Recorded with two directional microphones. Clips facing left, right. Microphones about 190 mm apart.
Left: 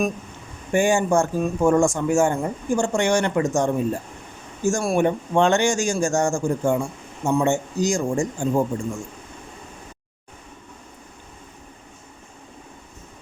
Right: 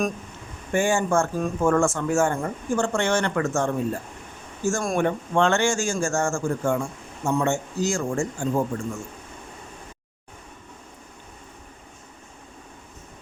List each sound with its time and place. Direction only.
0.7 s speech: 15° left (ahead or behind)